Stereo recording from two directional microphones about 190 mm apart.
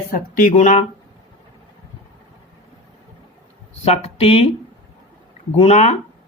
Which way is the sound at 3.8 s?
35° left (ahead or behind).